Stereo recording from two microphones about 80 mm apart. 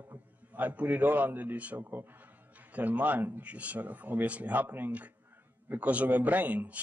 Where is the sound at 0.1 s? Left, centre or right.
Right.